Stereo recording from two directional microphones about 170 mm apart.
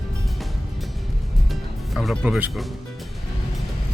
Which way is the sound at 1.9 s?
Centre (ahead or behind).